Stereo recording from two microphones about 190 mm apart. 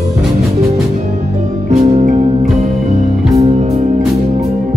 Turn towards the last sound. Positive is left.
turn(degrees=-35)  # may be behind; listen again after turning